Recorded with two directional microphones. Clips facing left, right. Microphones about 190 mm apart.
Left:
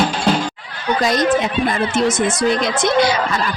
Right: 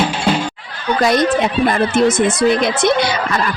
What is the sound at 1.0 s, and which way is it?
Speech, 60° right (ahead or behind).